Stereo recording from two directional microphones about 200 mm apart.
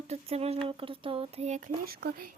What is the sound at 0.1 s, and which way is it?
Speech, 30° right (ahead or behind).